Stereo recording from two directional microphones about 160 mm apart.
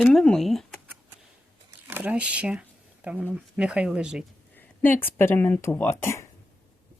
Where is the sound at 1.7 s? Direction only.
10° right (ahead or behind).